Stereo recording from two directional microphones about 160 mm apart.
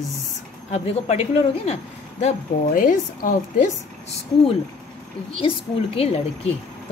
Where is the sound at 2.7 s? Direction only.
60° left (ahead or behind).